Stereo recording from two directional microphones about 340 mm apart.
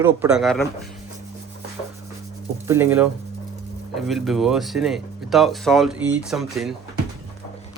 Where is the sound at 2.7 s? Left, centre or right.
Centre.